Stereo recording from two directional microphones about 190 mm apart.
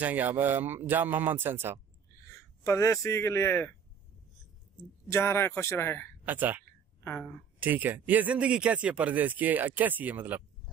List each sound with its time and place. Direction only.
0.0 s speech: 10° right (ahead or behind)
2.2 s speech: 15° left (ahead or behind)
5.0 s speech: 15° left (ahead or behind)
6.2 s speech: 10° right (ahead or behind)
7.1 s speech: 5° left (ahead or behind)
7.6 s speech: 10° right (ahead or behind)